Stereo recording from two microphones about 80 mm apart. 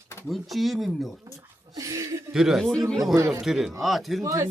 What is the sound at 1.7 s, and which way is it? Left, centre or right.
Speech, right.